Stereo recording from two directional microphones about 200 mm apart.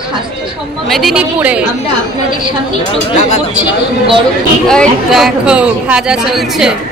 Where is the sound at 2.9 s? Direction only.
35° left (ahead or behind).